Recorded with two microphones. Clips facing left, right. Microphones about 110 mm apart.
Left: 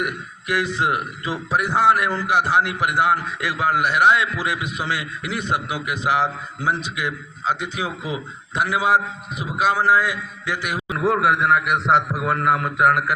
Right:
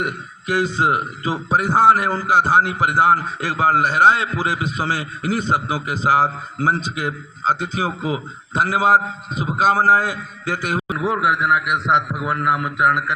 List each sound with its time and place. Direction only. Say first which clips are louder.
0.0 s a man's voice: right 1 dB; 30° right (ahead or behind)
10.9 s a man's voice: left 2 dB; centre (ahead or behind)